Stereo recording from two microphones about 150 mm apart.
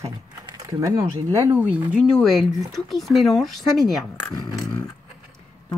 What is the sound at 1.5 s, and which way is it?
Speech, 10° right (ahead or behind).